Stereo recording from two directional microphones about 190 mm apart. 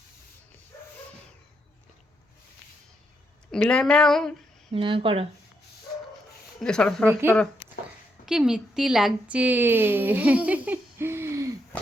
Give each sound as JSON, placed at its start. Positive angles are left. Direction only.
{"t": 3.5, "sound": "speech", "side_deg": 5}
{"t": 4.7, "sound": "speech", "side_deg": -30}
{"t": 6.6, "sound": "speech", "side_deg": 5}
{"t": 7.1, "sound": "a woman's voice", "side_deg": -10}
{"t": 11.7, "sound": "a sound", "side_deg": 10}